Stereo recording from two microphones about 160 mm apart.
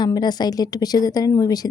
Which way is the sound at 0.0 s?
25° left (ahead or behind).